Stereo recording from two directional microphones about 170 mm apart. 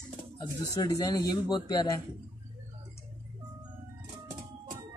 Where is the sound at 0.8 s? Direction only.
20° left (ahead or behind).